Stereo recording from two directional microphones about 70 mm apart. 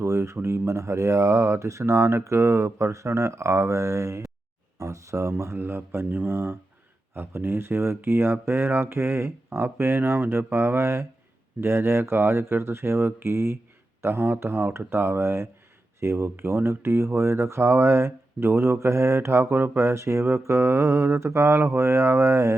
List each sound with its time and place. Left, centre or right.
0.0 s speech: right